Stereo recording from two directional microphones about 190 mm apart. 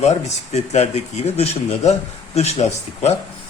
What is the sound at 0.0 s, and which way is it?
Speech, 35° left (ahead or behind).